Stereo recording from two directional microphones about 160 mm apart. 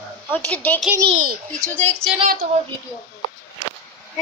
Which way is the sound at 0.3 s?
10° left (ahead or behind).